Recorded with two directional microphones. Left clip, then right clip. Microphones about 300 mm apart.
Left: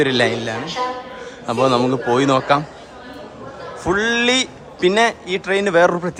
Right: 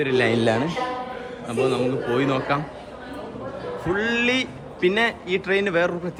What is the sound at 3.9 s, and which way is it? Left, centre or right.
Speech, centre.